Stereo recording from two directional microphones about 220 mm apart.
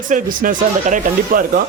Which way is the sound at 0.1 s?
40° right (ahead or behind).